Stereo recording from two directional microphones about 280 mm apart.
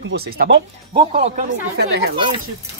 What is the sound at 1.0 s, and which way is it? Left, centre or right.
Speech, right.